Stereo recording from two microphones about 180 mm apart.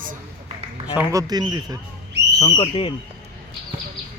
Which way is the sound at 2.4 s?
30° left (ahead or behind).